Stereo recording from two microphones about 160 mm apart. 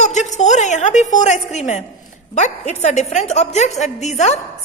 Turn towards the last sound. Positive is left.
turn(degrees=45)  # may be behind; listen again after turning